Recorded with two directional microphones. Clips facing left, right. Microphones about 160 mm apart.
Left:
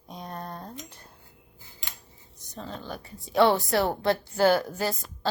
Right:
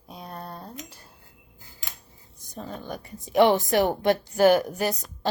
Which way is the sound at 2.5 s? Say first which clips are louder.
Right 2 dB; 15° right (ahead or behind).